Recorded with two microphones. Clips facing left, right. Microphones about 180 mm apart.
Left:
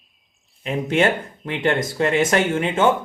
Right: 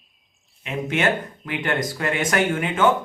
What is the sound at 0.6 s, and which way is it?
Speech, 30° left (ahead or behind).